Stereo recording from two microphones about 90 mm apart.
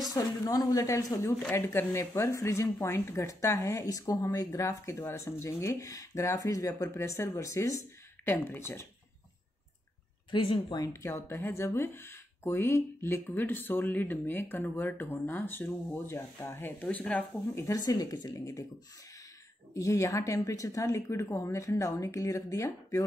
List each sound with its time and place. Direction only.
0.1 s speech: 45° left (ahead or behind)
1.5 s speech: 25° left (ahead or behind)
8.3 s speech: 25° left (ahead or behind)
10.3 s speech: 65° left (ahead or behind)
10.8 s speech: 35° left (ahead or behind)
16.8 s speech: 15° left (ahead or behind)
17.8 s speech: 45° left (ahead or behind)
18.3 s speech: 40° left (ahead or behind)
19.7 s speech: 35° left (ahead or behind)